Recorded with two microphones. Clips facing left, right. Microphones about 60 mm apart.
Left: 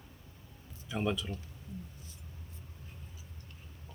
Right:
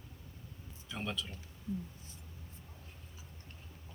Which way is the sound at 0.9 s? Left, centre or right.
Centre.